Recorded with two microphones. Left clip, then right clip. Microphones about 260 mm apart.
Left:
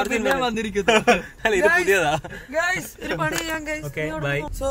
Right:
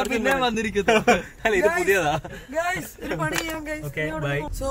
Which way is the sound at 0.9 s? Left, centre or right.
Left.